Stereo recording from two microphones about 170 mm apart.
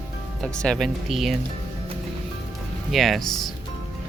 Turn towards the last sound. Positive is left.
turn(degrees=0)  # may be behind; listen again after turning